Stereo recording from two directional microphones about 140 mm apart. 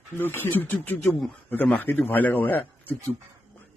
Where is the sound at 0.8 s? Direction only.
15° left (ahead or behind).